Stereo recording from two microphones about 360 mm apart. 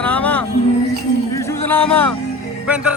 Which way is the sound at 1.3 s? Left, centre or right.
Centre.